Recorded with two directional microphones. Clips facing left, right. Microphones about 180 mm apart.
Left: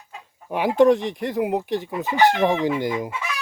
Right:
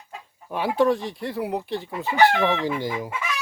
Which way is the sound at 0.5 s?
15° left (ahead or behind).